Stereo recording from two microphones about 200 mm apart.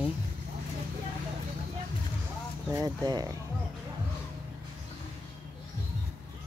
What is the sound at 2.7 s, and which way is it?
Speech, 20° right (ahead or behind).